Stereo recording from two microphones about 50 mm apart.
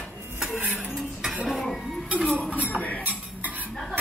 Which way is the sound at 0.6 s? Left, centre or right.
Right.